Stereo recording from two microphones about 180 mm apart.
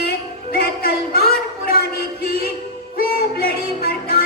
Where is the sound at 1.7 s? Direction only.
60° left (ahead or behind).